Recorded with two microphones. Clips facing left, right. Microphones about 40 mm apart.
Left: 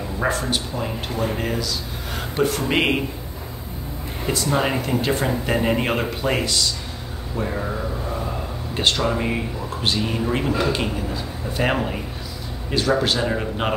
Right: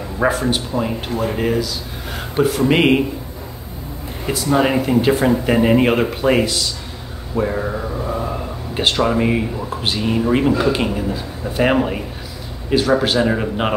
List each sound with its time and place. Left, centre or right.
0.2 s speech: centre
4.3 s speech: centre